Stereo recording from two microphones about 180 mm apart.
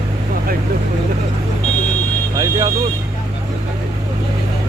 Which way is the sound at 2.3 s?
20° right (ahead or behind).